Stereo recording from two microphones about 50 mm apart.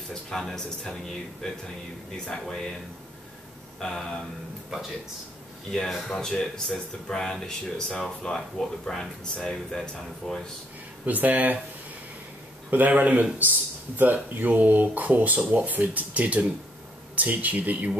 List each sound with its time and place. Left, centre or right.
0.1 s speech: centre
2.2 s speech: centre
3.8 s speech: centre
4.6 s speech: centre
6.0 s speech: centre
11.1 s speech: right
12.7 s speech: right